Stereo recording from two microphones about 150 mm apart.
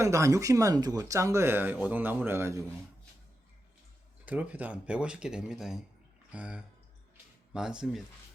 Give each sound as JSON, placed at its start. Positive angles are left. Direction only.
{"t": 0.0, "sound": "speech", "side_deg": -20}
{"t": 4.3, "sound": "speech", "side_deg": -10}